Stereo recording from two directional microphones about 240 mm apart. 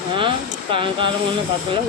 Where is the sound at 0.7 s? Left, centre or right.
Right.